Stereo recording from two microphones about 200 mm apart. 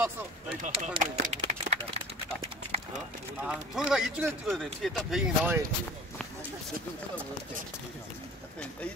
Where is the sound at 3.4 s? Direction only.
5° right (ahead or behind).